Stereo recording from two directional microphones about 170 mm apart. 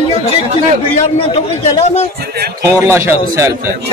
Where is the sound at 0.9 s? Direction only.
40° left (ahead or behind).